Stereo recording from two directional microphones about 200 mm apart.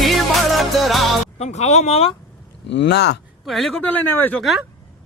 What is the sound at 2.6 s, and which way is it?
Speech, 60° left (ahead or behind).